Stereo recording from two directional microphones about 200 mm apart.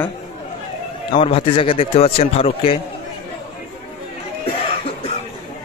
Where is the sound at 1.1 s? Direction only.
25° left (ahead or behind).